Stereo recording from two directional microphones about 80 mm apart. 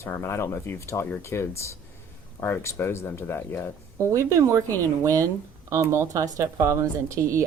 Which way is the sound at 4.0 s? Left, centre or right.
Right.